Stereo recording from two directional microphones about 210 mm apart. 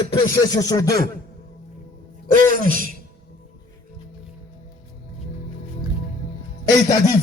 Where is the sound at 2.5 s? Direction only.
40° right (ahead or behind).